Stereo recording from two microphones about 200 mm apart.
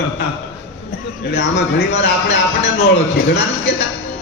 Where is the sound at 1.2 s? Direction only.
55° left (ahead or behind).